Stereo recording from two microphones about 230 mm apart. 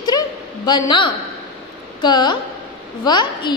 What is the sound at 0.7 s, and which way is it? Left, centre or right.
A woman's voice, centre.